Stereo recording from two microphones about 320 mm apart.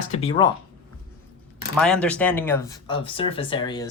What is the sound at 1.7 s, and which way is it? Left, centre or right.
Speech, centre.